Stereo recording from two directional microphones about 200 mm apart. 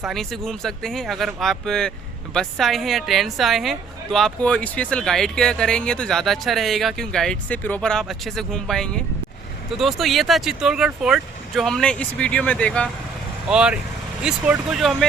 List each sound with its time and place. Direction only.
0.0 s a woman's voice: centre (ahead or behind)
13.5 s a woman's voice: 5° right (ahead or behind)